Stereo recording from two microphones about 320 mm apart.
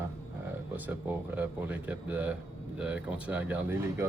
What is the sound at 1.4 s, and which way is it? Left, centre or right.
Speech, centre.